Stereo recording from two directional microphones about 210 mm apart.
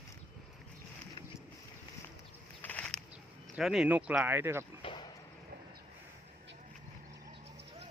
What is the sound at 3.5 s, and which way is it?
Speech, centre (ahead or behind).